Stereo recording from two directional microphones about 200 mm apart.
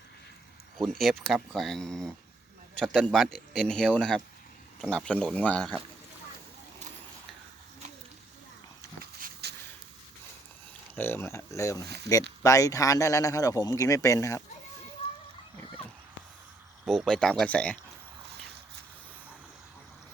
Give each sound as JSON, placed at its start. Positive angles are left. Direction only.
{"t": 0.8, "sound": "speech", "side_deg": 0}
{"t": 9.0, "sound": "a sound", "side_deg": -50}
{"t": 10.9, "sound": "speech", "side_deg": 10}
{"t": 16.8, "sound": "speech", "side_deg": 0}